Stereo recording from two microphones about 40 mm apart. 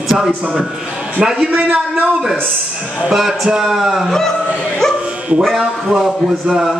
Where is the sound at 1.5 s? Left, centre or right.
Right.